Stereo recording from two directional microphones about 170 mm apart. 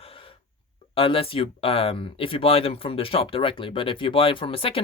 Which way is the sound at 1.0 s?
35° left (ahead or behind).